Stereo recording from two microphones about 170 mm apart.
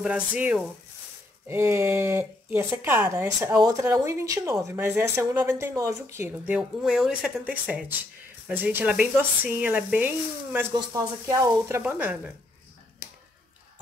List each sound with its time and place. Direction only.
0.0 s speech: 5° right (ahead or behind)
6.5 s speech: 5° right (ahead or behind)
10.7 s speech: 20° right (ahead or behind)
11.8 s speech: 10° right (ahead or behind)